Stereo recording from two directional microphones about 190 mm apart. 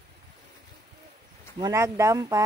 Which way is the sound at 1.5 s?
20° right (ahead or behind).